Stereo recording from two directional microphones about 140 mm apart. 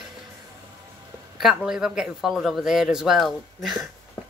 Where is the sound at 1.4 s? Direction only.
5° right (ahead or behind).